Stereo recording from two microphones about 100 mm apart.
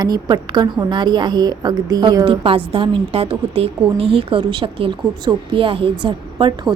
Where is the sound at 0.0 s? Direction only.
45° right (ahead or behind).